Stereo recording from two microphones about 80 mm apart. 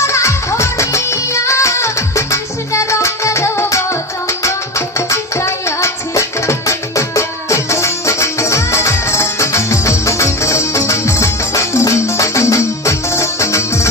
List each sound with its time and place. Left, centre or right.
0.0 s music: left